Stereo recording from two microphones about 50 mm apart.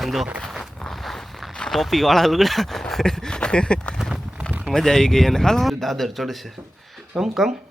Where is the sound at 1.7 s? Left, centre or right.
Centre.